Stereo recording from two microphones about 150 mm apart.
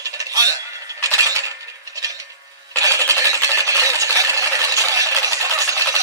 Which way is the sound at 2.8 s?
20° right (ahead or behind).